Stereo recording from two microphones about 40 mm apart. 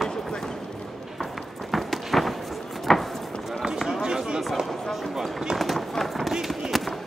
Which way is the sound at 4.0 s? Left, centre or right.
Centre.